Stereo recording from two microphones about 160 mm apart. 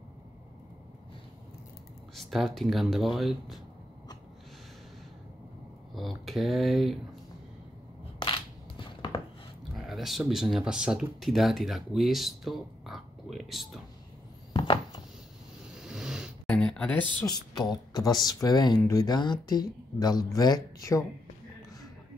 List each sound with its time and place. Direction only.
2.1 s speech: centre (ahead or behind)
5.9 s speech: centre (ahead or behind)
8.2 s crushing: 30° left (ahead or behind)
9.8 s speech: centre (ahead or behind)
14.5 s a sound: 30° left (ahead or behind)
15.7 s vehicle: 5° right (ahead or behind)
16.4 s a sound: 5° left (ahead or behind)
17.3 s speech: 25° left (ahead or behind)